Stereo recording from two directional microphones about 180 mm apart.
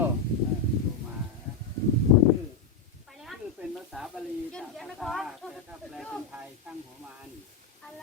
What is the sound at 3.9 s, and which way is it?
Sizzle, centre (ahead or behind).